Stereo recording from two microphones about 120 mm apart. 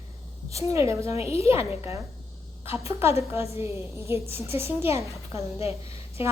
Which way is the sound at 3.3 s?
55° left (ahead or behind).